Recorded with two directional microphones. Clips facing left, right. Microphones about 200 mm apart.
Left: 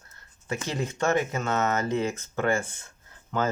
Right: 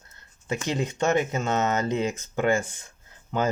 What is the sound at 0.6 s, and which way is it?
Speech, 20° right (ahead or behind).